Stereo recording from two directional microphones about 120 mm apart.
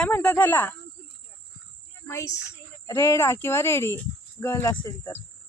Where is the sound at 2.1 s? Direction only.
25° left (ahead or behind).